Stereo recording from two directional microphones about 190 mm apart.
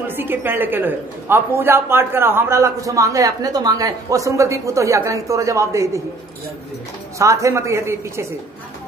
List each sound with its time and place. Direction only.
0.0 s a man's voice: 10° right (ahead or behind)
7.2 s a man's voice: 15° right (ahead or behind)